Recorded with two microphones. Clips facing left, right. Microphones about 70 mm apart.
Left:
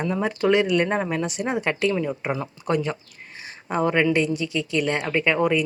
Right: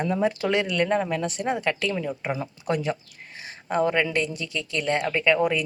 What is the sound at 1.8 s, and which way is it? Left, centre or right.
Speech, left.